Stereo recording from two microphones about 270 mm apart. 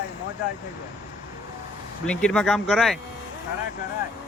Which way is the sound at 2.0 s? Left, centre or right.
Centre.